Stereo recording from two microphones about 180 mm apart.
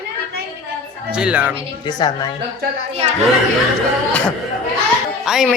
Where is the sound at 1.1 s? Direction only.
5° right (ahead or behind).